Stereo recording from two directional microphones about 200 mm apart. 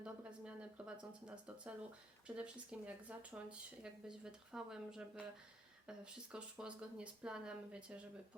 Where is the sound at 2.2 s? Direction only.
5° right (ahead or behind).